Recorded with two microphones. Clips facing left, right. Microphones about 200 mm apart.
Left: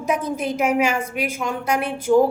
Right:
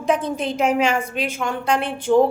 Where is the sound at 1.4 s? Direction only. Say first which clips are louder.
Right 2 dB; 30° right (ahead or behind).